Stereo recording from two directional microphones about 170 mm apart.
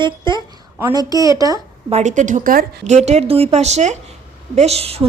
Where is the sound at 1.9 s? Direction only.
45° right (ahead or behind); by 2.9 s 65° right (ahead or behind).